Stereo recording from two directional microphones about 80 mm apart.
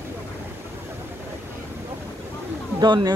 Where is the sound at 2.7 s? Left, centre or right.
Right.